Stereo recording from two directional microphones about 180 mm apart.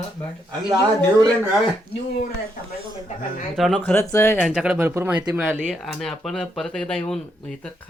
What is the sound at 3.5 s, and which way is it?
Speech, centre (ahead or behind).